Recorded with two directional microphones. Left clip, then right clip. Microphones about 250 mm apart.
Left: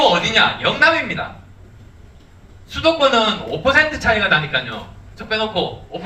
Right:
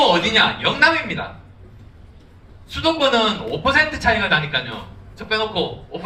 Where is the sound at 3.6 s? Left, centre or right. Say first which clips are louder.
Left 2 dB; centre.